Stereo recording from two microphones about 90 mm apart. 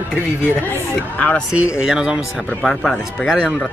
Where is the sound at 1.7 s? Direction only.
10° right (ahead or behind).